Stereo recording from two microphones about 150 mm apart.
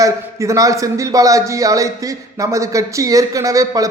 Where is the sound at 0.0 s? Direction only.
20° right (ahead or behind).